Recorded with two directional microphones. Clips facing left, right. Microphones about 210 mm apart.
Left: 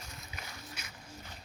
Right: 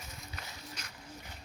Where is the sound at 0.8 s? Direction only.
10° left (ahead or behind).